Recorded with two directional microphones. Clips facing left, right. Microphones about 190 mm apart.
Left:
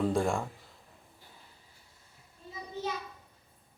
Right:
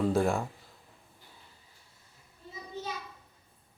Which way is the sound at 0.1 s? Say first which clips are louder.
Right 2 dB; centre (ahead or behind).